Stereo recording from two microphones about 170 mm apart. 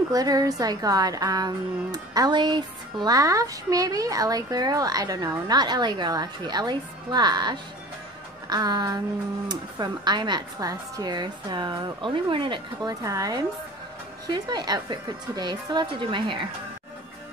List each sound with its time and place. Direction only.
0.1 s a woman's voice: 20° right (ahead or behind)